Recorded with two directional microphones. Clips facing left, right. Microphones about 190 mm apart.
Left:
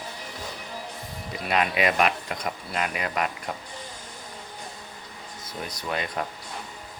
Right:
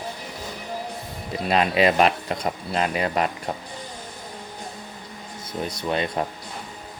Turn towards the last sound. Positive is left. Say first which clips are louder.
# right 5 dB
turn(degrees=-25)  # may be behind; listen again after turning